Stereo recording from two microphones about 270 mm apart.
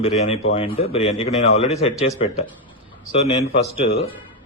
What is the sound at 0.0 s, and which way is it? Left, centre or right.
A man's voice, left.